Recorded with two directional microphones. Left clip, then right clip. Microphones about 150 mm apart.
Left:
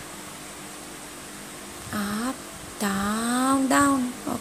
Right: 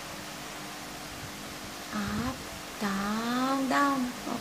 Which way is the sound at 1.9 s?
45° left (ahead or behind).